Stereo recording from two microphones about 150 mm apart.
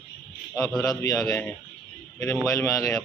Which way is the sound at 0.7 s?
Centre (ahead or behind).